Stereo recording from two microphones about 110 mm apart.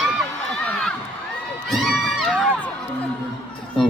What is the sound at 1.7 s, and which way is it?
Crowd, centre (ahead or behind).